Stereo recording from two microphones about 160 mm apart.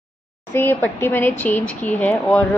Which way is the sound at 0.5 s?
15° left (ahead or behind).